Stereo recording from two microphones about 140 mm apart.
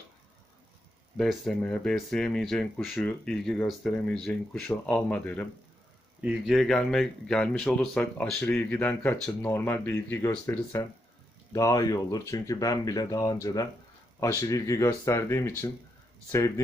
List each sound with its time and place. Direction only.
1.1 s speech: centre (ahead or behind)
6.2 s speech: 5° right (ahead or behind); by 15.7 s 20° left (ahead or behind)